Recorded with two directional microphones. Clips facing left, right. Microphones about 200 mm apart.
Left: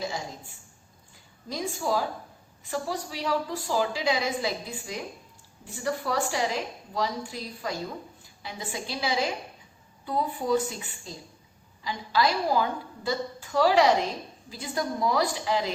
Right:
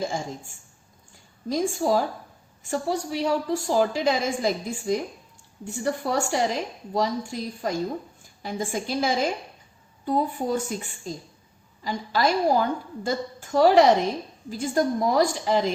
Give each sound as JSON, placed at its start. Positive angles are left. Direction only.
{"t": 0.0, "sound": "a woman's voice", "side_deg": -50}